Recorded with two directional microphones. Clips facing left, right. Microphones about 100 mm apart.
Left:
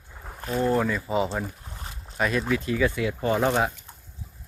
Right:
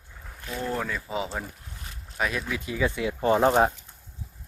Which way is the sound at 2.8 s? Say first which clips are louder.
Even; 20° right (ahead or behind).